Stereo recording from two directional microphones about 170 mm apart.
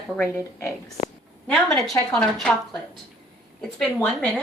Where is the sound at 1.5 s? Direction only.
Centre (ahead or behind).